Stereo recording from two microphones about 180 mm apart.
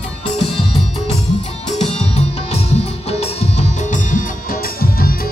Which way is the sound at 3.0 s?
35° left (ahead or behind).